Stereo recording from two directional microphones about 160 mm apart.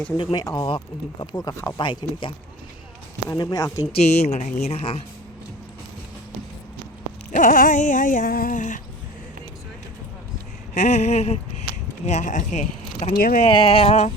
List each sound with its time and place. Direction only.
0.2 s speech: 25° left (ahead or behind)
4.0 s speech: 45° left (ahead or behind)
7.3 s a sound: 55° left (ahead or behind)
10.8 s speech: 45° left (ahead or behind)
13.4 s speech: 35° left (ahead or behind)